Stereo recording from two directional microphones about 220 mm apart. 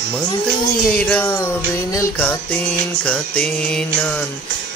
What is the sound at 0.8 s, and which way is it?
Music, 5° left (ahead or behind).